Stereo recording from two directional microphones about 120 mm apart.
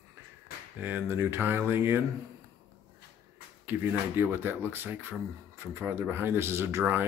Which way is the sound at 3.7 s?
15° right (ahead or behind).